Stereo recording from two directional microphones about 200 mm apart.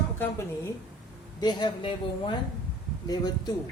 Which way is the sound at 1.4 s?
20° left (ahead or behind).